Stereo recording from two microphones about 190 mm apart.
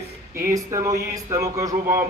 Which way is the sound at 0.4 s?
15° right (ahead or behind).